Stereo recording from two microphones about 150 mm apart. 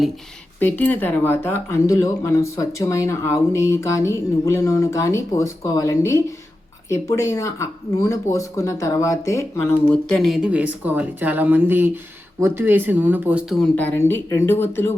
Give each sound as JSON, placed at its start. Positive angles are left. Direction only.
{"t": 0.6, "sound": "speech", "side_deg": 10}
{"t": 9.9, "sound": "speech", "side_deg": 0}
{"t": 13.6, "sound": "speech", "side_deg": 10}